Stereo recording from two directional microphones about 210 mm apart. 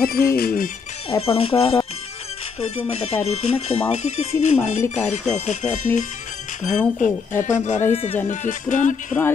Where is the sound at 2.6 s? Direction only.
30° left (ahead or behind).